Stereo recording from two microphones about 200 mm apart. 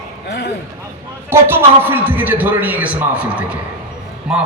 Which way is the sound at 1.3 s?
10° right (ahead or behind).